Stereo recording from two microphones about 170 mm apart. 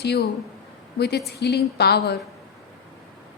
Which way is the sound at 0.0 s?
75° left (ahead or behind).